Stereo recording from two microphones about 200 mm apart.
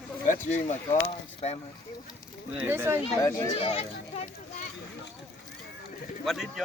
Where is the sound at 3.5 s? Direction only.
30° left (ahead or behind).